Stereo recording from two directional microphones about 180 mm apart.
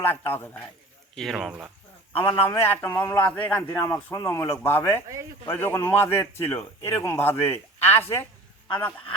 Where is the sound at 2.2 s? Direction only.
15° left (ahead or behind).